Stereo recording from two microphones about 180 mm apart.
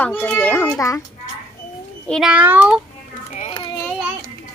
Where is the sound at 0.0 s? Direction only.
5° left (ahead or behind).